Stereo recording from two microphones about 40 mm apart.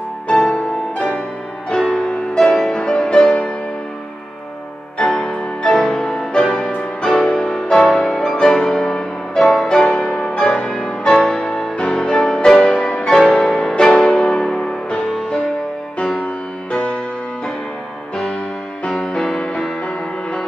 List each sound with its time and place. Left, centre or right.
0.3 s music: left
5.0 s music: centre
10.4 s music: left
11.1 s music: centre
11.4 s music: left
12.5 s music: left
13.4 s music: centre
16.7 s music: left
18.9 s music: left